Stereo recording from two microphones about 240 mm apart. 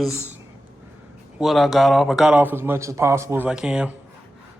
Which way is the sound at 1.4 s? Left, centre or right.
Centre.